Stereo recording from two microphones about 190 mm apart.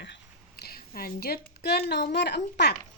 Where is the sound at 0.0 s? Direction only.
60° left (ahead or behind).